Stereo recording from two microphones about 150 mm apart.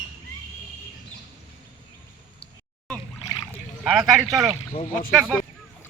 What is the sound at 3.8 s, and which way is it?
Speech, centre (ahead or behind).